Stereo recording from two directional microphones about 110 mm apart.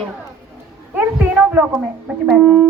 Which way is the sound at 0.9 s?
15° right (ahead or behind).